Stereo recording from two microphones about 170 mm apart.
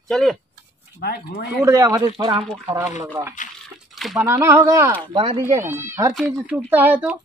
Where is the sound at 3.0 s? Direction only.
15° right (ahead or behind).